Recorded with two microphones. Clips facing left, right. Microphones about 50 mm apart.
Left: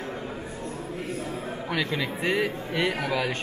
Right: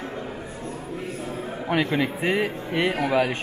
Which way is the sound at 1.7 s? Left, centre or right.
Right.